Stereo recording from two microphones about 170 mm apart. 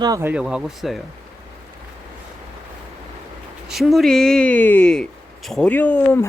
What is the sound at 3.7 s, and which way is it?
A woman's voice, centre (ahead or behind).